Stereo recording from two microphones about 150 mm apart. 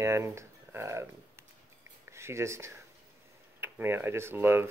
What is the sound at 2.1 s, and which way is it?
Speech, 20° right (ahead or behind).